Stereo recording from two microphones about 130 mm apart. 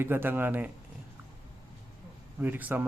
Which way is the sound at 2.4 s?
10° right (ahead or behind).